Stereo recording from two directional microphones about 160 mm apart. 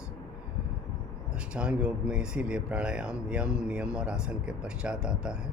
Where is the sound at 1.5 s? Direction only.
5° right (ahead or behind).